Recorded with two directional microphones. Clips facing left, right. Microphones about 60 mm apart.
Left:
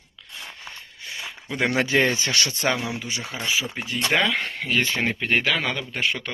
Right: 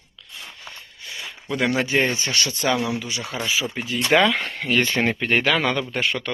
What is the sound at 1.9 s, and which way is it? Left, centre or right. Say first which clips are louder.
Speech: left 1 dB; left.